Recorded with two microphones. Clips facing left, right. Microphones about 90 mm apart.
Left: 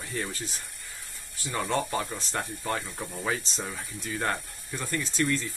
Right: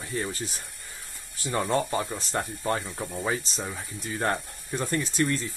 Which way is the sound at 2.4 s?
30° right (ahead or behind).